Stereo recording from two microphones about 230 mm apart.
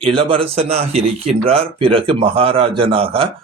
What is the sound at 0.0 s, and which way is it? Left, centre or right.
Speech, right.